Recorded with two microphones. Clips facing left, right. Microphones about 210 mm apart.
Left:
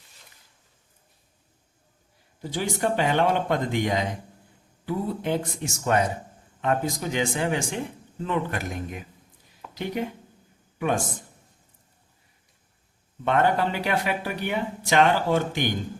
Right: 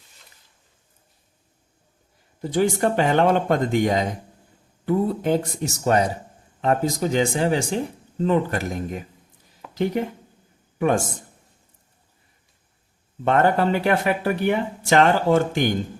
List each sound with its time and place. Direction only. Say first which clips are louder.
2.4 s speech: right 7 dB; 50° right (ahead or behind)
10.8 s a man's voice: right 5 dB; 45° right (ahead or behind)
13.2 s speech: right 4 dB; 45° right (ahead or behind)